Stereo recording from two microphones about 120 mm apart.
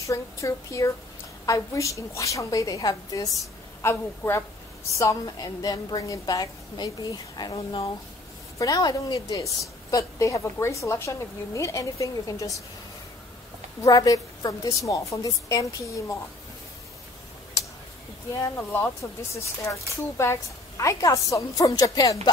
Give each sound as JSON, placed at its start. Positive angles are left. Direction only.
{"t": 0.0, "sound": "a woman's voice", "side_deg": 25}
{"t": 3.8, "sound": "a woman's voice", "side_deg": 20}
{"t": 13.7, "sound": "a woman's voice", "side_deg": 30}
{"t": 18.4, "sound": "a woman's voice", "side_deg": 20}